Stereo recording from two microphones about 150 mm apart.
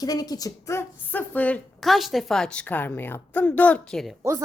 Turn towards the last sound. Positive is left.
turn(degrees=5)  # may be behind; listen again after turning